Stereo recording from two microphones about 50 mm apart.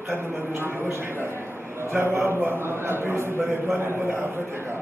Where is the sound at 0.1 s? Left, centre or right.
Right.